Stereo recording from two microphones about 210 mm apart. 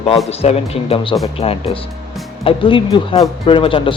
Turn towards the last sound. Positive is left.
turn(degrees=25)  # may be behind; listen again after turning